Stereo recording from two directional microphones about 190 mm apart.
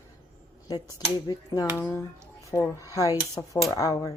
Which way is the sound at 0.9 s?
20° left (ahead or behind).